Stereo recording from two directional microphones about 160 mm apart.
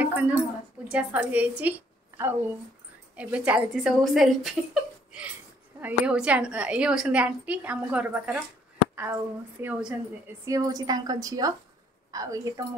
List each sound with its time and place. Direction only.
0.0 s a sound: 10° right (ahead or behind)
0.8 s a woman's voice: 10° right (ahead or behind)
1.6 s a sound: 10° right (ahead or behind)
3.2 s a woman's voice: 10° right (ahead or behind)
5.8 s a woman's voice: 10° right (ahead or behind)
10.4 s a woman's voice: 20° right (ahead or behind)